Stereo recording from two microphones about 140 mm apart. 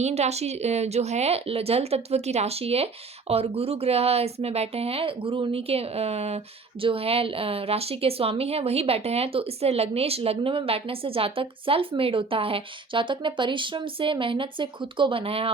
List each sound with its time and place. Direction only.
0.0 s a woman's voice: 50° right (ahead or behind)